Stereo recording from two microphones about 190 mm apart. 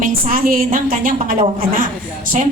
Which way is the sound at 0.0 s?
50° right (ahead or behind).